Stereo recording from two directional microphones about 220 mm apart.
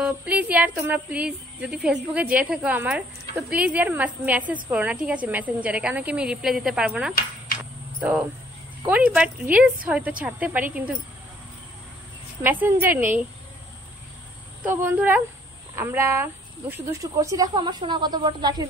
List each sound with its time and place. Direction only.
0.0 s a woman's voice: 5° right (ahead or behind)
8.8 s a woman's voice: 5° right (ahead or behind)
12.4 s speech: 10° right (ahead or behind)
14.6 s speech: 10° right (ahead or behind)